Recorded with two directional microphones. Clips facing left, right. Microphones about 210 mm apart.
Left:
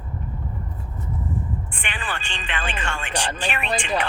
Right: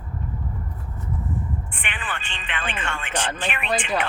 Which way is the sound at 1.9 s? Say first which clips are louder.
Left 2 dB; 40° left (ahead or behind).